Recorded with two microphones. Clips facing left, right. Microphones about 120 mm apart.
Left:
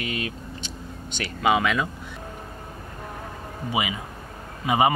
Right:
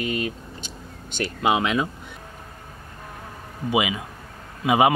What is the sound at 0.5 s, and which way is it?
Vehicle, 50° right (ahead or behind).